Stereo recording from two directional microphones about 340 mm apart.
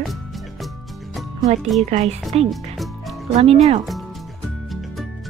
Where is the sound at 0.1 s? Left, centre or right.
Centre.